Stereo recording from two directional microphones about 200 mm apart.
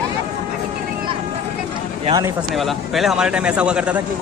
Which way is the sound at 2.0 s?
20° right (ahead or behind).